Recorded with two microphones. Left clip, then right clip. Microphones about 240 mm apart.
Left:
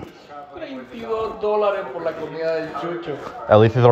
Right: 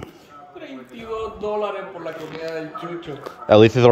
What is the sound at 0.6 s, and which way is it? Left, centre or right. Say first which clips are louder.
A man's voice: left 3 dB; right.